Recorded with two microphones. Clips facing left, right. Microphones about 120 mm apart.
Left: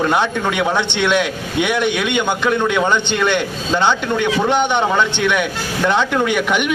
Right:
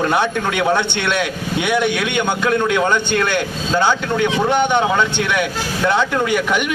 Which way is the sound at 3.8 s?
10° right (ahead or behind).